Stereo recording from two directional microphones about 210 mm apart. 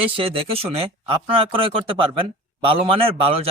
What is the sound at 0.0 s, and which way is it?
Speech, 25° right (ahead or behind).